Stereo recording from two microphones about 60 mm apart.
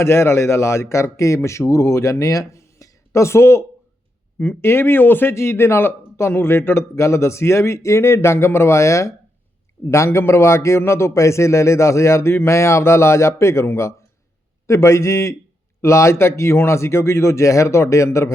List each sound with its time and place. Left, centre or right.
0.0 s a man's voice: left
4.6 s speech: left
5.3 s a man's voice: left
6.9 s a man's voice: left